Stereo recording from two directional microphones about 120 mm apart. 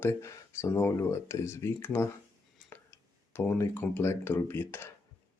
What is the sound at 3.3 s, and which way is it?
Speech, 20° left (ahead or behind).